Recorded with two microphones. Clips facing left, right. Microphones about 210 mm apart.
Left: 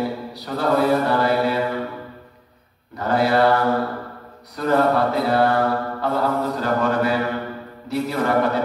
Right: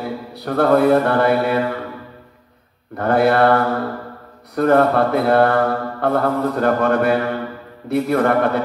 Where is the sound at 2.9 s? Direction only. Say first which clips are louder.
Right 4 dB; 55° right (ahead or behind).